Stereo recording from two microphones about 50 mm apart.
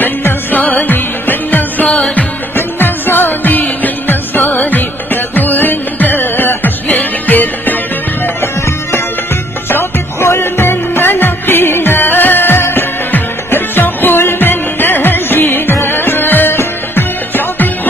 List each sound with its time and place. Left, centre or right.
0.0 s music: left
8.4 s music: left